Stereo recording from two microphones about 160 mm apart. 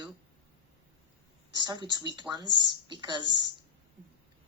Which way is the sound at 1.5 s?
25° right (ahead or behind).